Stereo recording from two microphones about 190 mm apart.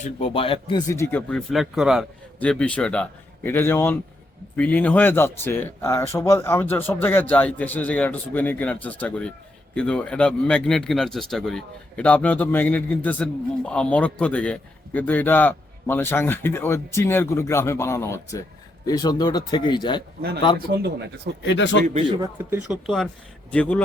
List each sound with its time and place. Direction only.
0.0 s speech: 35° left (ahead or behind)
0.9 s speech: 10° left (ahead or behind)
21.4 s speech: 70° left (ahead or behind)
21.8 s speech: 35° right (ahead or behind)
22.2 s speech: 10° right (ahead or behind); by 23.8 s 5° left (ahead or behind)